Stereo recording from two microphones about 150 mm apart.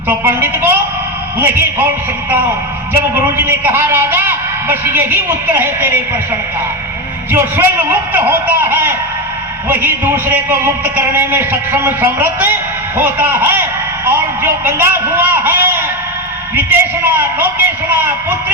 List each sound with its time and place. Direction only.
0.1 s a man's voice: 15° right (ahead or behind)
2.9 s a man's voice: 15° right (ahead or behind)
7.3 s a man's voice: 15° right (ahead or behind)